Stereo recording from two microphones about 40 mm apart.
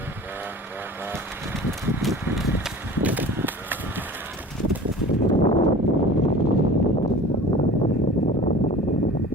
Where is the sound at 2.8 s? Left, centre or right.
Right.